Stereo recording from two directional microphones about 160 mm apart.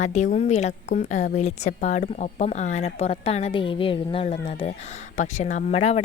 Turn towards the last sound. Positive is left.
turn(degrees=45)  # may be behind; listen again after turning